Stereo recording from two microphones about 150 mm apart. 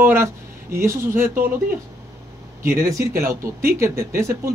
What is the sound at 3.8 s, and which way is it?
Speech, 20° right (ahead or behind).